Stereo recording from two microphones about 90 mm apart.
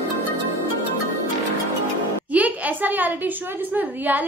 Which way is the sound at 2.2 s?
15° right (ahead or behind).